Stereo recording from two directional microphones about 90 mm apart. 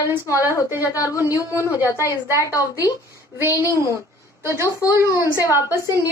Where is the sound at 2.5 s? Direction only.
40° left (ahead or behind).